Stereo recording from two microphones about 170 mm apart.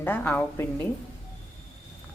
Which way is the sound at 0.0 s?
10° left (ahead or behind).